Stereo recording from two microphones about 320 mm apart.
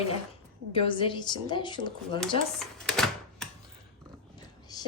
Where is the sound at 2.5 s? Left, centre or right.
Centre.